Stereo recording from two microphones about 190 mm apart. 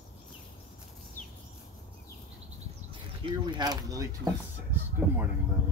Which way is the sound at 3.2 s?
25° right (ahead or behind).